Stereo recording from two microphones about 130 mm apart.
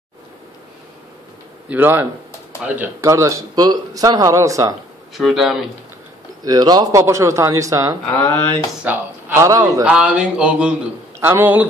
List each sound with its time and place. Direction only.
1.7 s speech: 15° right (ahead or behind)
3.1 s speech: 25° right (ahead or behind)
5.1 s speech: centre (ahead or behind)
6.4 s speech: 30° right (ahead or behind)
8.2 s speech: 20° left (ahead or behind)
8.8 s a man's voice: 20° right (ahead or behind)
9.8 s speech: 10° right (ahead or behind)
11.1 s a man's voice: 20° right (ahead or behind)